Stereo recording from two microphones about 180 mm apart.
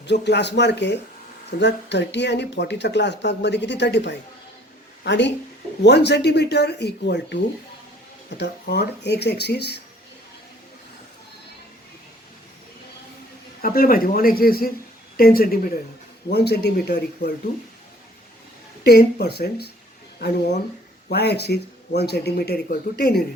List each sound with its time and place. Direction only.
0.0 s speech: 70° left (ahead or behind)
8.4 s speech: 65° left (ahead or behind)
13.6 s a man's voice: 50° left (ahead or behind)
16.3 s speech: 65° left (ahead or behind)
18.8 s speech: 65° left (ahead or behind)
21.1 s speech: 65° left (ahead or behind)